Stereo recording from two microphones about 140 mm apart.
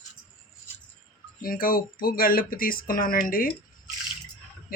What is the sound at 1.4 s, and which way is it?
Speech, 90° left.